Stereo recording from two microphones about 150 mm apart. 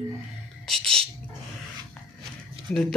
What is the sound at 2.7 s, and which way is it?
Speech, 5° left (ahead or behind).